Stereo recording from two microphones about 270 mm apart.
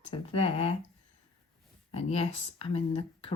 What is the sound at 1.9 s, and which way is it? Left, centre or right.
Speech, left.